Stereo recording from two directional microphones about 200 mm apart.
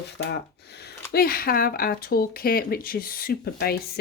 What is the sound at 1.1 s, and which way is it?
Speech, 50° left (ahead or behind).